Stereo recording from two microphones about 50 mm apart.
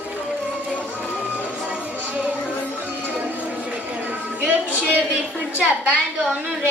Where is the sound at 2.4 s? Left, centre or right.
Left.